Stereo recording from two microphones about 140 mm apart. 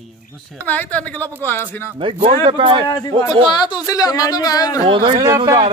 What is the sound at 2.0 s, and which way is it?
Speech, 40° right (ahead or behind).